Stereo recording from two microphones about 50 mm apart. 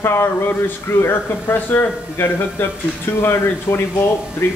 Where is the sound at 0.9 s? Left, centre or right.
Left.